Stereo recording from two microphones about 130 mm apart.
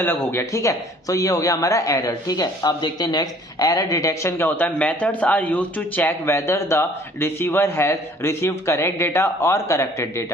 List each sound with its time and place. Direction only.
0.0 s a man's voice: 15° left (ahead or behind)